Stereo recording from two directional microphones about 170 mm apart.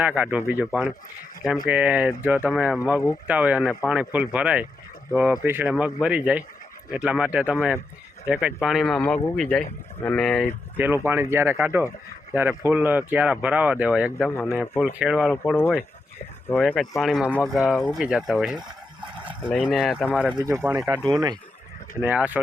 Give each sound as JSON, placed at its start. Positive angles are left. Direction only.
{"t": 0.0, "sound": "speech", "side_deg": -5}
{"t": 10.8, "sound": "speech", "side_deg": -10}
{"t": 14.3, "sound": "speech", "side_deg": 15}
{"t": 14.9, "sound": "speech", "side_deg": -5}
{"t": 22.0, "sound": "speech", "side_deg": -10}